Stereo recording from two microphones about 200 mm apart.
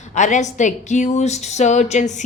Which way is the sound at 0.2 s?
35° left (ahead or behind).